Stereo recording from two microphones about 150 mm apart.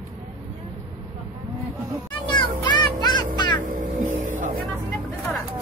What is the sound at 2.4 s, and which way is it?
Music, 30° left (ahead or behind).